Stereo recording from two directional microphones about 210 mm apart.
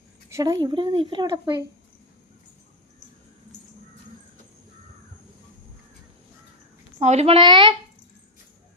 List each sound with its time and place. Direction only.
0.3 s speech: 15° right (ahead or behind)
7.0 s speech: 30° right (ahead or behind)